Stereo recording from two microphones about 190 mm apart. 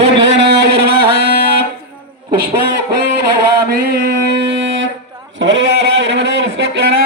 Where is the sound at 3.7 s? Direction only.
50° right (ahead or behind).